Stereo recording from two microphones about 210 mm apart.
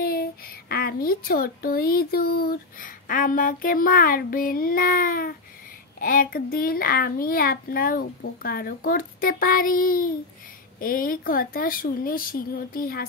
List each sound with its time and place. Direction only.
0.0 s speech: 45° left (ahead or behind)